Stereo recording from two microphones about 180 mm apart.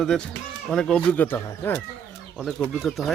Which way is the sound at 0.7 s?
5° left (ahead or behind).